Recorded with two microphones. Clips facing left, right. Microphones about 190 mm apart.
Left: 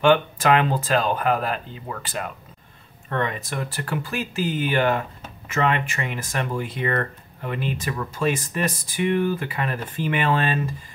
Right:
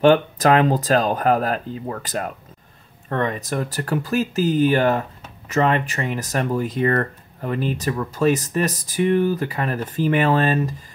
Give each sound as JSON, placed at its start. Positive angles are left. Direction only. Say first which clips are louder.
{"t": 0.0, "sound": "speech", "louder": "right 3 dB", "side_deg": -40}